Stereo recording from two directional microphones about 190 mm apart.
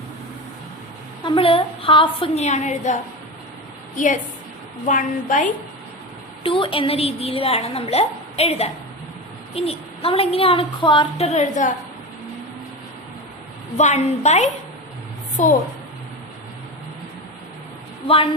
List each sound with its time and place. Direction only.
1.2 s a woman's voice: 30° left (ahead or behind)
6.4 s a woman's voice: 30° left (ahead or behind)
13.7 s a woman's voice: 35° left (ahead or behind)